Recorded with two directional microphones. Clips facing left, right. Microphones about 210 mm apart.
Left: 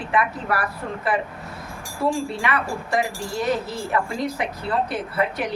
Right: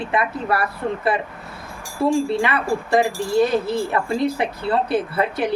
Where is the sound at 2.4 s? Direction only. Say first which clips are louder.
Right 4 dB; 30° right (ahead or behind).